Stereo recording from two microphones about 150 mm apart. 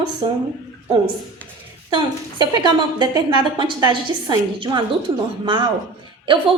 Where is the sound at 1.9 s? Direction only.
30° right (ahead or behind).